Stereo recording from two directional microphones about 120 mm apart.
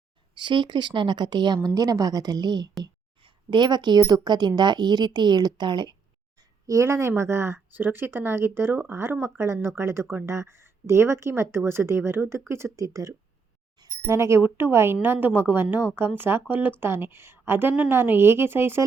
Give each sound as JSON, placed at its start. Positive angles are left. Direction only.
{"t": 0.3, "sound": "a woman's voice", "side_deg": -40}
{"t": 6.7, "sound": "a woman's voice", "side_deg": -25}